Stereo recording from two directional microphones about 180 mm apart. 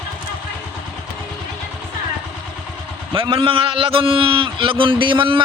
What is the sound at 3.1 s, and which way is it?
A man's voice, 30° right (ahead or behind).